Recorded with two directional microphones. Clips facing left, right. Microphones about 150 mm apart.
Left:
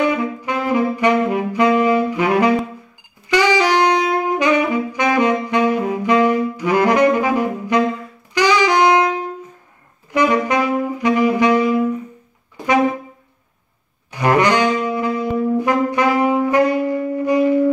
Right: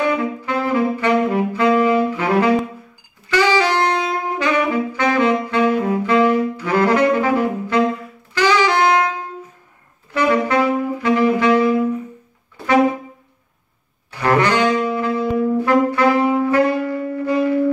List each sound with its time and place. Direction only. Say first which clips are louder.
0.4 s saxophone: even; 15° left (ahead or behind)
10.1 s saxophone: even; 15° left (ahead or behind)
14.1 s saxophone: left 1 dB; 15° left (ahead or behind)